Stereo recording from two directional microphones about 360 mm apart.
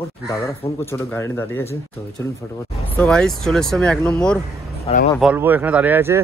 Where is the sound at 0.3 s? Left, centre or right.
Centre.